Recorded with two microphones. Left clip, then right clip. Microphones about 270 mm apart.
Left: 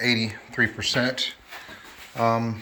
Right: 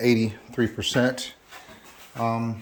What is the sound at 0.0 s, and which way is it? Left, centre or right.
Speech, right.